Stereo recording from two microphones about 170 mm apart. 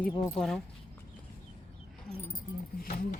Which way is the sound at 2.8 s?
45° left (ahead or behind).